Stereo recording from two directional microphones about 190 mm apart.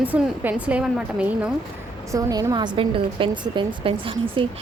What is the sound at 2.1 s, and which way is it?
A woman's voice, 20° right (ahead or behind).